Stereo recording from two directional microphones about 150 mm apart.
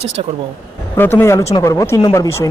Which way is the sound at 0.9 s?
15° left (ahead or behind).